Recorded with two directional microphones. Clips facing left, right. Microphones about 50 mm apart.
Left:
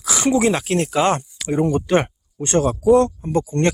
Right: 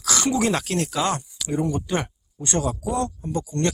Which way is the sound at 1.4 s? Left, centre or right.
Left.